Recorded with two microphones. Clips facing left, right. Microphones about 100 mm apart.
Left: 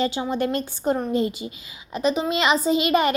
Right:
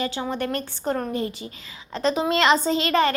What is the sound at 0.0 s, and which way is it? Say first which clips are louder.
Speech: left 3 dB; 20° left (ahead or behind).